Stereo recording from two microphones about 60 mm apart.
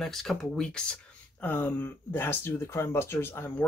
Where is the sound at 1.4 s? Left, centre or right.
Left.